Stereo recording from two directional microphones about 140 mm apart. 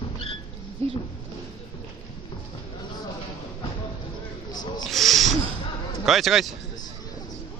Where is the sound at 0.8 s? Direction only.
45° right (ahead or behind).